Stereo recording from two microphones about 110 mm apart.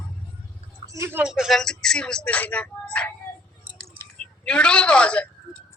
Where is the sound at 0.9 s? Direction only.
25° right (ahead or behind).